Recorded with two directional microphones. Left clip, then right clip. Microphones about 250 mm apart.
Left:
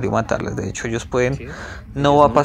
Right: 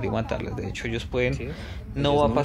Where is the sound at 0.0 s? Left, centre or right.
Centre.